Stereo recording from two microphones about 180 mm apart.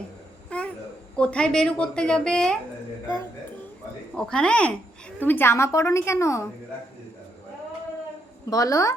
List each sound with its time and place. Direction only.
0.5 s a sound: 5° left (ahead or behind)
1.1 s a woman's voice: 5° left (ahead or behind)
4.1 s a woman's voice: 5° left (ahead or behind)
8.4 s a woman's voice: 20° left (ahead or behind)